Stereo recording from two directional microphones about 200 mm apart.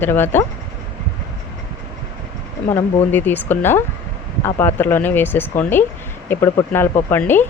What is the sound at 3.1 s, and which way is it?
Speech, 10° left (ahead or behind).